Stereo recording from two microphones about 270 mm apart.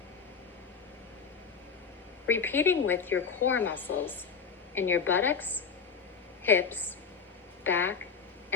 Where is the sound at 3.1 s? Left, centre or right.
Left.